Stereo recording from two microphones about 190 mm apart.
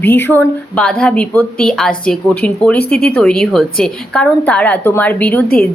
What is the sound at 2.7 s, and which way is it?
Speech, 55° left (ahead or behind).